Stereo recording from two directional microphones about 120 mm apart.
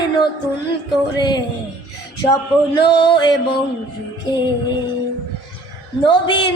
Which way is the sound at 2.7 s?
40° left (ahead or behind).